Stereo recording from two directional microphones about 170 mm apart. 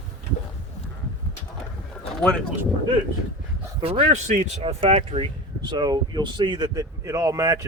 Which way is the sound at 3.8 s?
40° right (ahead or behind).